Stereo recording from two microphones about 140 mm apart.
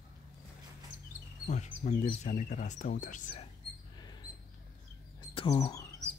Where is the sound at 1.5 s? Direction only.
60° left (ahead or behind).